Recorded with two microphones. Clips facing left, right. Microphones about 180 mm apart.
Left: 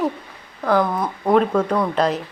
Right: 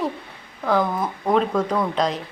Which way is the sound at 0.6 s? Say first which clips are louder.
Left 2 dB; centre (ahead or behind).